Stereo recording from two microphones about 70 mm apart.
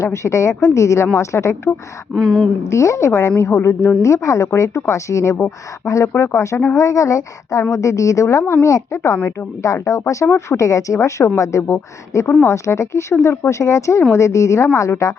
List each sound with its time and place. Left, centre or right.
0.0 s a woman's voice: left
2.1 s speech: centre
2.6 s a woman's voice: left
11.6 s a woman's voice: left